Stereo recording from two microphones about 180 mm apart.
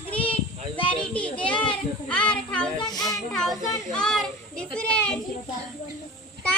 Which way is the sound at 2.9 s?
20° left (ahead or behind).